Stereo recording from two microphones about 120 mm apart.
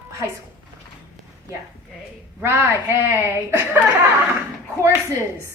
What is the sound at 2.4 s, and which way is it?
A woman's voice, 20° right (ahead or behind).